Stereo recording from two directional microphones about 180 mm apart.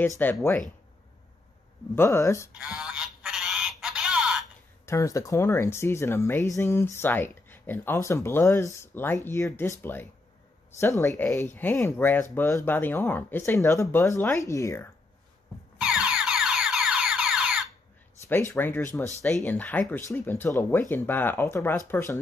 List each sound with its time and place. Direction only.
0.2 s speech: 10° left (ahead or behind)
2.0 s speech: 15° left (ahead or behind)
2.6 s honk: 5° right (ahead or behind)
4.8 s speech: 15° left (ahead or behind)
15.8 s music: 5° right (ahead or behind)
18.3 s speech: 15° left (ahead or behind)